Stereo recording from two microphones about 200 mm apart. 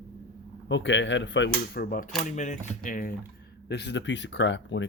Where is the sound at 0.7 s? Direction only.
65° left (ahead or behind); by 3.1 s 45° left (ahead or behind).